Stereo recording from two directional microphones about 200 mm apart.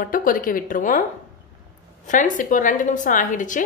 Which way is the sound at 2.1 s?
40° left (ahead or behind).